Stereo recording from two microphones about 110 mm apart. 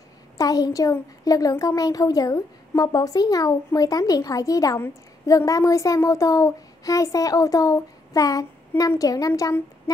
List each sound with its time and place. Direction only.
0.4 s a woman's voice: 35° left (ahead or behind)